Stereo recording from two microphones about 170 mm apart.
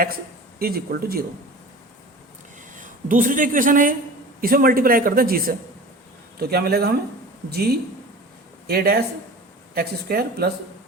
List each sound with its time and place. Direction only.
0.6 s a man's voice: 65° right (ahead or behind)
2.7 s a man's voice: 50° right (ahead or behind); by 10.5 s 70° right (ahead or behind)